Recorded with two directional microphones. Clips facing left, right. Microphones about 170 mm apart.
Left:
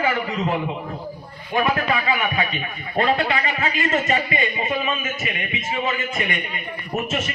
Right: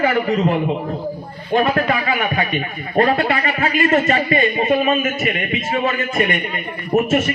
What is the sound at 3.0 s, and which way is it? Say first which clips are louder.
A man's voice: right 4 dB; 55° right (ahead or behind).